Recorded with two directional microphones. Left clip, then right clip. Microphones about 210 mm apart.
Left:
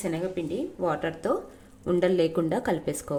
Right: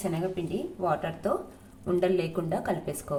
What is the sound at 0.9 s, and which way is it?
A woman's voice, 40° left (ahead or behind).